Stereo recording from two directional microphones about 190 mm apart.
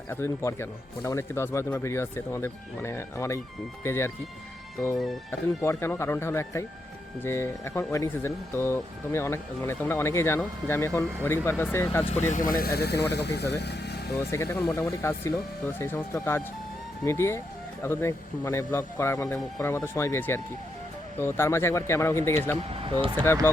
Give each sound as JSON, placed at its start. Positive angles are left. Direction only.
{"t": 0.1, "sound": "speech", "side_deg": 15}
{"t": 5.6, "sound": "speech", "side_deg": 15}
{"t": 12.3, "sound": "speech", "side_deg": 45}
{"t": 14.2, "sound": "speech", "side_deg": 15}
{"t": 22.7, "sound": "speech", "side_deg": -30}